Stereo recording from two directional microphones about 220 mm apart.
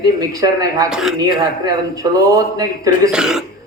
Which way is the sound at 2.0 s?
15° right (ahead or behind).